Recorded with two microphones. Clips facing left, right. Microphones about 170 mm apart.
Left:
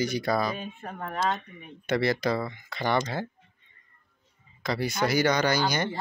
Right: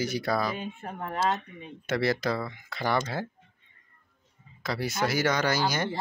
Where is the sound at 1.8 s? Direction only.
Centre (ahead or behind).